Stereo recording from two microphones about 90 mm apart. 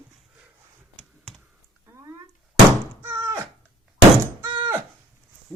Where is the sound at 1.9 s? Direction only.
30° right (ahead or behind).